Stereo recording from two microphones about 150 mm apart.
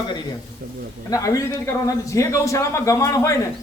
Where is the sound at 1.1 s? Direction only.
20° left (ahead or behind).